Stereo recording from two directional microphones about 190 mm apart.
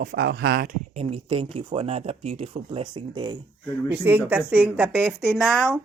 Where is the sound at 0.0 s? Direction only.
50° right (ahead or behind).